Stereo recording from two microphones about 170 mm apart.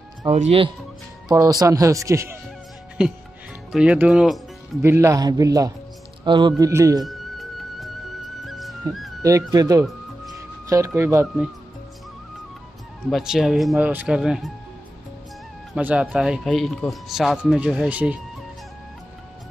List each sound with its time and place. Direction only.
0.3 s speech: 35° right (ahead or behind)
1.3 s speech: 20° right (ahead or behind)
3.7 s speech: 5° right (ahead or behind)
4.8 s speech: 15° right (ahead or behind)
7.1 s music: centre (ahead or behind)
9.2 s speech: 20° right (ahead or behind)
11.0 s speech: 15° right (ahead or behind)
13.0 s speech: 5° right (ahead or behind)
15.7 s speech: 10° right (ahead or behind)